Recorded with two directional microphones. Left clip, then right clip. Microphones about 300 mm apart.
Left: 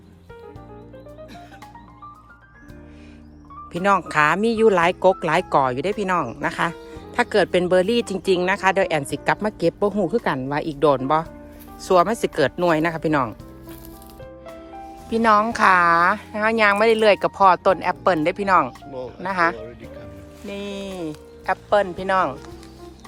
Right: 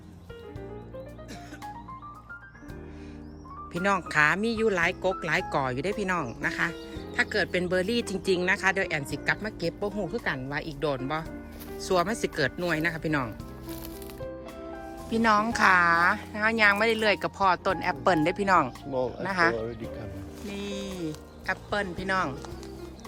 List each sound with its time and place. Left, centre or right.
3.7 s speech: centre
15.1 s speech: centre
18.9 s speech: right
19.2 s speech: centre